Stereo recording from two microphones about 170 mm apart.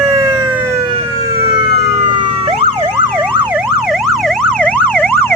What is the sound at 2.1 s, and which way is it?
Emergency vehicle, 30° right (ahead or behind).